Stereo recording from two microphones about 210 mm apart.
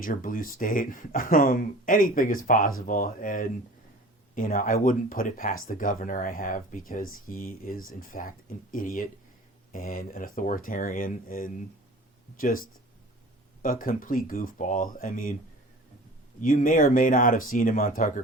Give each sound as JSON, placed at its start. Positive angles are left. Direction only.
{"t": 0.0, "sound": "speech", "side_deg": 40}
{"t": 16.4, "sound": "speech", "side_deg": 40}